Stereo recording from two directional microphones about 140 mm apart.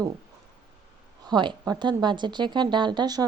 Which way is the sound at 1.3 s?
30° right (ahead or behind).